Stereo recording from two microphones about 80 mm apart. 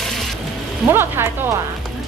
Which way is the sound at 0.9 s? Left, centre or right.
Right.